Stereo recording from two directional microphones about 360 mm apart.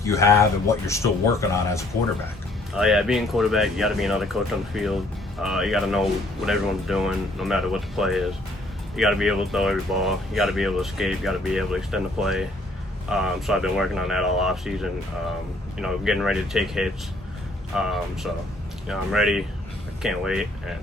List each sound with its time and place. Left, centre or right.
0.0 s speech: centre